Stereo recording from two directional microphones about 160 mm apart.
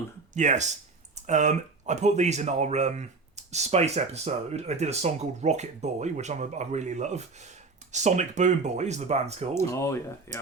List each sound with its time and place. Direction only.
0.3 s speech: 50° right (ahead or behind)
9.6 s speech: 15° left (ahead or behind)